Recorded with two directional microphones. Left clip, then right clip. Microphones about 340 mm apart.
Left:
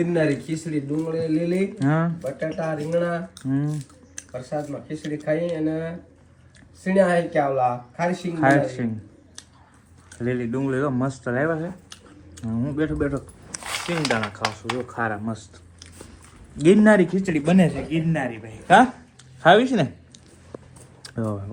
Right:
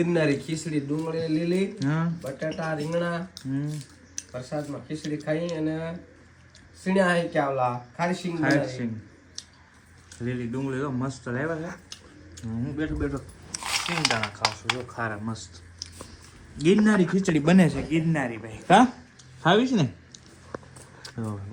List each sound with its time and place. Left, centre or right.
0.0 s speech: centre
10.1 s speech: centre
12.7 s speech: centre
16.6 s speech: centre
17.1 s speech: right
17.6 s speech: centre
19.5 s speech: centre
21.0 s typing: centre